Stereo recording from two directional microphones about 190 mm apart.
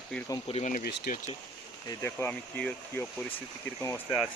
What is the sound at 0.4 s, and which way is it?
Speech, 35° left (ahead or behind).